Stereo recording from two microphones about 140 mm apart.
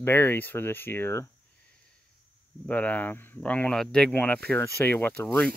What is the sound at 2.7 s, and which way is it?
Speech, 10° left (ahead or behind).